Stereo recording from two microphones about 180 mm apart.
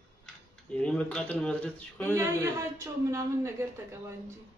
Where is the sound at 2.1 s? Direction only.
15° right (ahead or behind).